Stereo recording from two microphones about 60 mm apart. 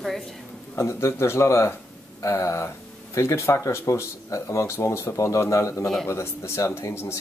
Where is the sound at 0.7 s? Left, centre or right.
Left.